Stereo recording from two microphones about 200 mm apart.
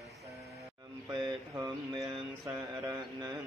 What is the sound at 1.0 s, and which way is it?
Mantra, 20° right (ahead or behind).